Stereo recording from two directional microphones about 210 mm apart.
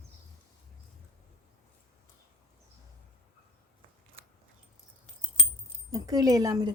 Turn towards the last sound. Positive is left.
turn(degrees=-20)  # may be behind; listen again after turning